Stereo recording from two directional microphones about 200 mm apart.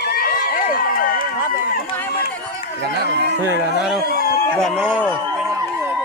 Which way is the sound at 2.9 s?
55° right (ahead or behind).